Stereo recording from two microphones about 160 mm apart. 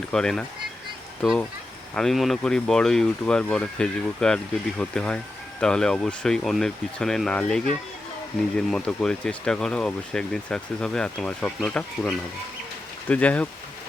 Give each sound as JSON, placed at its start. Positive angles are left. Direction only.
{"t": 0.1, "sound": "speech", "side_deg": 5}